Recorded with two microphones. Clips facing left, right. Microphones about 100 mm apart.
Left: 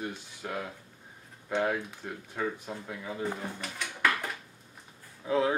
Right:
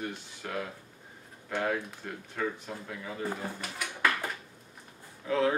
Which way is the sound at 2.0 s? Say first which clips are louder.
Left 1 dB; 10° left (ahead or behind).